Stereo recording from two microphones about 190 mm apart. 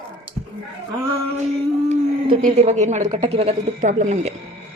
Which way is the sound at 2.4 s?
35° right (ahead or behind).